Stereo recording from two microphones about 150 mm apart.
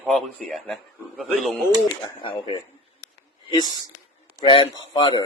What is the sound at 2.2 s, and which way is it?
Speech, 35° left (ahead or behind).